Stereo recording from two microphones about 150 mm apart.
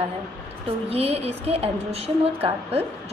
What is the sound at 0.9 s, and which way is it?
A woman's voice, 40° right (ahead or behind).